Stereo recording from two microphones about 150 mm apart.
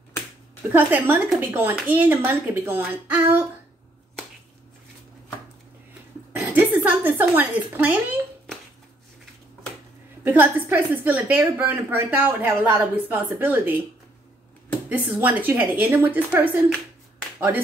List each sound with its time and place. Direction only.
0.7 s a woman's voice: 10° right (ahead or behind)
6.3 s a sound: 10° right (ahead or behind)
10.2 s a woman's voice: 10° right (ahead or behind)
14.9 s a woman's voice: 10° right (ahead or behind)